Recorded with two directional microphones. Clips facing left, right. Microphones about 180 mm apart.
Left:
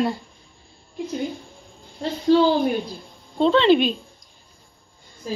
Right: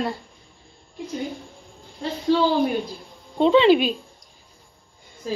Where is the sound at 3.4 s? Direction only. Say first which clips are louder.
Right 1 dB; 10° right (ahead or behind).